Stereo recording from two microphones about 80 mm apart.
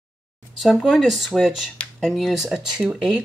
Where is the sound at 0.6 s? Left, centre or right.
Centre.